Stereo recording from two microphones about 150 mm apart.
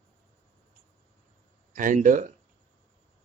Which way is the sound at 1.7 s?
60° right (ahead or behind).